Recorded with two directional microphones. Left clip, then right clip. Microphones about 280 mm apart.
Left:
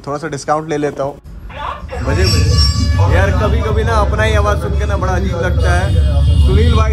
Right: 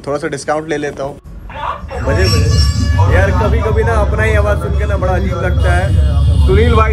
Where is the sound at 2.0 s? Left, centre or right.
Centre.